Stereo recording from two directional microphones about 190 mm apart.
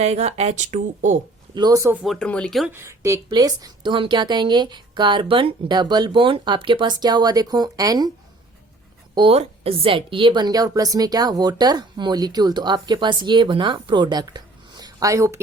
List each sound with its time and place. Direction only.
0.0 s speech: 35° right (ahead or behind)
1.5 s speech: 20° right (ahead or behind)
2.1 s speech: 5° left (ahead or behind)
2.7 s a woman's voice: 15° right (ahead or behind)
9.1 s a woman's voice: 30° right (ahead or behind)